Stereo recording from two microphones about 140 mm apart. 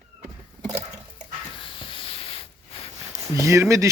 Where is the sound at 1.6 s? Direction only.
40° left (ahead or behind).